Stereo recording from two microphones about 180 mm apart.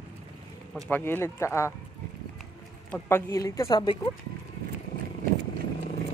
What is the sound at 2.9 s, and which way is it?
Speech, 15° left (ahead or behind).